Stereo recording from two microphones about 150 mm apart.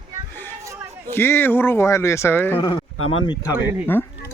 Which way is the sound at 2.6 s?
30° left (ahead or behind).